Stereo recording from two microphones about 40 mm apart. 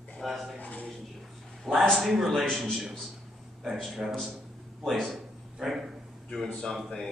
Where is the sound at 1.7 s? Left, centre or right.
Centre.